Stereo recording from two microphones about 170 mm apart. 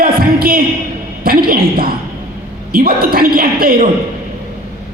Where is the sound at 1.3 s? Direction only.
60° right (ahead or behind).